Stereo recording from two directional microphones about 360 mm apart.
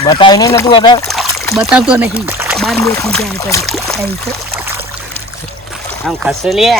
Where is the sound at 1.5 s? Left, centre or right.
Centre.